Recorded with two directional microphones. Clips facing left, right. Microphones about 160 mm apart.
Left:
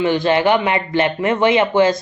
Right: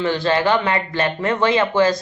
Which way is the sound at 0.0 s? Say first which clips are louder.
Left 3 dB; 15° left (ahead or behind).